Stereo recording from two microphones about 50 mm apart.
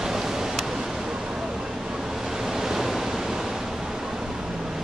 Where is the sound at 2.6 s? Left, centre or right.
Centre.